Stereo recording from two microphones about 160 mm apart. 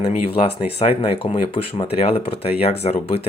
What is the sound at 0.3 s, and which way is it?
Speech, 35° left (ahead or behind).